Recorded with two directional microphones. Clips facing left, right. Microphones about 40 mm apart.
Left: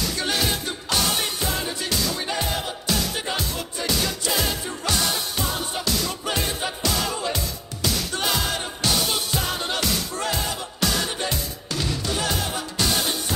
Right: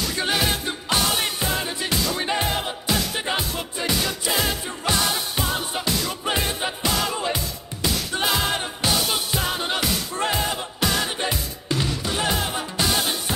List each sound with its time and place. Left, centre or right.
0.2 s music: centre
10.1 s music: right